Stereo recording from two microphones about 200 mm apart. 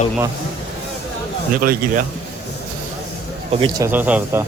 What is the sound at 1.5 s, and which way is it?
Speech, 45° right (ahead or behind).